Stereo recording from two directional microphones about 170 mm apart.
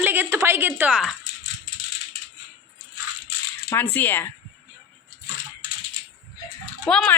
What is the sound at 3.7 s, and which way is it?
Speech, 10° left (ahead or behind).